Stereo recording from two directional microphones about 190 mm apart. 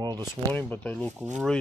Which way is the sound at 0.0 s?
20° right (ahead or behind).